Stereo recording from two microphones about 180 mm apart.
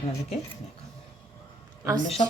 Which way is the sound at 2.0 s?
35° left (ahead or behind).